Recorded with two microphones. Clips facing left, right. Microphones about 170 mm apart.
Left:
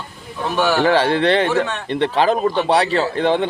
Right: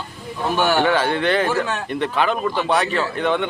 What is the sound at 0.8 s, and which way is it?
A man's voice, 30° left (ahead or behind).